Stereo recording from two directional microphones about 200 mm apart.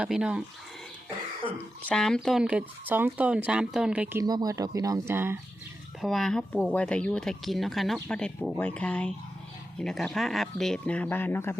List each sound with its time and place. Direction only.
0.0 s speech: 5° right (ahead or behind)
1.5 s speech: 5° left (ahead or behind)
4.2 s speech: 20° right (ahead or behind)
6.0 s speech: centre (ahead or behind)